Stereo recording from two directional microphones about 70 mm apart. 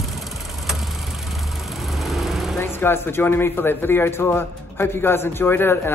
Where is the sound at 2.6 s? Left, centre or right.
Left.